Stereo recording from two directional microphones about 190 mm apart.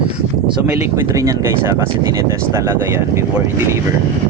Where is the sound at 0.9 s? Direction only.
15° right (ahead or behind).